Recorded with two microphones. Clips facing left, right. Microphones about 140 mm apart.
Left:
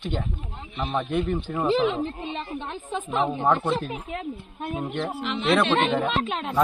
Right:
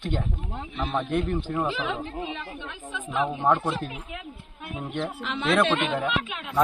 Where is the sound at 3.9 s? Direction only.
50° left (ahead or behind).